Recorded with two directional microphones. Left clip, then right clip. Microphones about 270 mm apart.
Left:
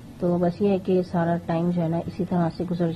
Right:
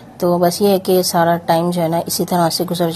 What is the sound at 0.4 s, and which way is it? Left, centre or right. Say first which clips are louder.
A woman's voice: right 10 dB; right.